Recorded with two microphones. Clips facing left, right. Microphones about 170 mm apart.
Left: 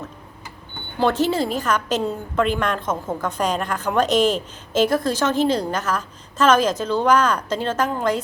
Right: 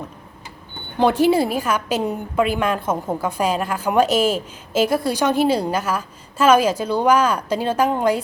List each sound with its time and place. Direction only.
0.9 s a woman's voice: 10° right (ahead or behind)